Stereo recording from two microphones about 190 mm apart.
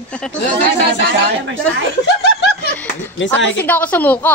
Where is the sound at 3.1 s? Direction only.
75° left (ahead or behind).